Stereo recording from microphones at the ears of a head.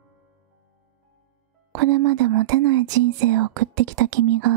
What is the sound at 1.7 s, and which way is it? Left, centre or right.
Speech, right.